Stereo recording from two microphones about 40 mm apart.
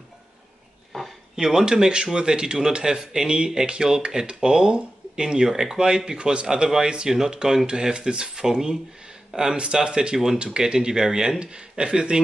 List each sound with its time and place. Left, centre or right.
0.9 s a sound: centre
1.3 s speech: centre
10.1 s speech: centre
10.4 s speech: right